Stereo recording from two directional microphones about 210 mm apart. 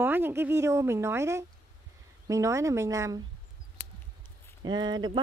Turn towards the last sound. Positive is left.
turn(degrees=-20)  # may be behind; listen again after turning